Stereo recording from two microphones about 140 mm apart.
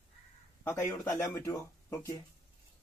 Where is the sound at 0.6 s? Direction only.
20° left (ahead or behind).